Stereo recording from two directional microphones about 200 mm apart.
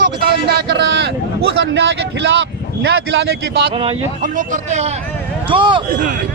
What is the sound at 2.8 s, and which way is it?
Speech, 55° right (ahead or behind).